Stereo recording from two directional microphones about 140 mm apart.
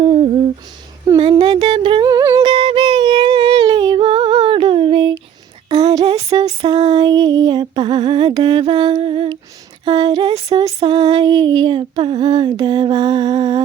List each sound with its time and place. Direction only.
0.0 s humming: 40° right (ahead or behind)
1.2 s female singing: 35° right (ahead or behind)
2.0 s music: 25° right (ahead or behind)
5.6 s a sound: 30° right (ahead or behind)
6.6 s music: 30° right (ahead or behind)
9.8 s a sound: 30° right (ahead or behind)
10.8 s female singing: 35° right (ahead or behind)